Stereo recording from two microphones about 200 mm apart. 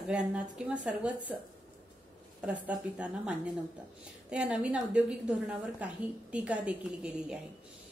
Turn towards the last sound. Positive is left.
turn(degrees=-5)  # may be behind; listen again after turning